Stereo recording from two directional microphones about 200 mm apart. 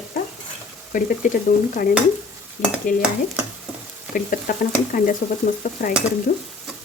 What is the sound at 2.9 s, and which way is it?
Speech, 40° left (ahead or behind).